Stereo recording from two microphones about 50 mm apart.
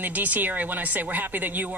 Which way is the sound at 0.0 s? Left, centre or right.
Right.